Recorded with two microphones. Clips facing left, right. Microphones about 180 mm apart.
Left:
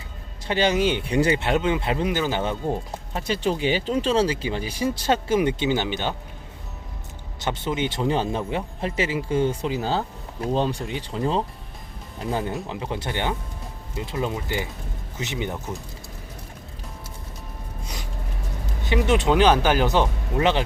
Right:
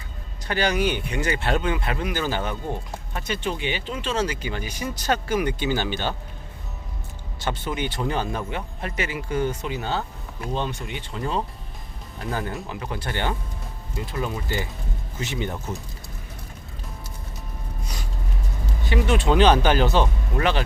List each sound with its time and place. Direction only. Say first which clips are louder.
0.4 s speech: left 2 dB; 25° left (ahead or behind)
1.4 s speech: left 2 dB; 20° left (ahead or behind)
7.3 s speech: left 2 dB; 20° left (ahead or behind)
18.9 s speech: left 1 dB; 20° left (ahead or behind)